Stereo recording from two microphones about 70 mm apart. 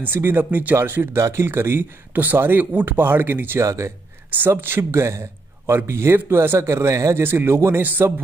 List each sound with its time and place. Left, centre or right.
0.0 s speech: right
1.1 s speech: right
1.4 s speech: right
3.6 s speech: right
7.2 s speech: right